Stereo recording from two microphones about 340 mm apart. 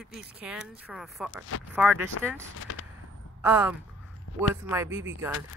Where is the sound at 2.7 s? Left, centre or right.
Left.